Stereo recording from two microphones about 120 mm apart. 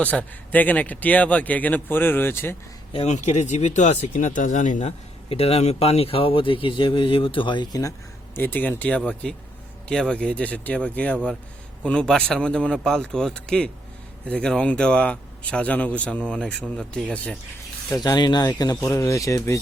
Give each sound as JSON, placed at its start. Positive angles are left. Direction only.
{"t": 0.0, "sound": "speech", "side_deg": 15}
{"t": 2.9, "sound": "speech", "side_deg": 65}
{"t": 8.4, "sound": "speech", "side_deg": 15}
{"t": 17.9, "sound": "speech", "side_deg": 35}